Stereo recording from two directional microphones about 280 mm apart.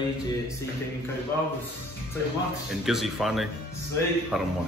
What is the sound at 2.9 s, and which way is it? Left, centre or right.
A man's voice, centre.